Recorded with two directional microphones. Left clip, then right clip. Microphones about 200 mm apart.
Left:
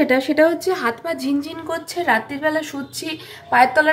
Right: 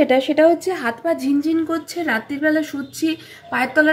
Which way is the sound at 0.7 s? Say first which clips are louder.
Left 2 dB; 90° left.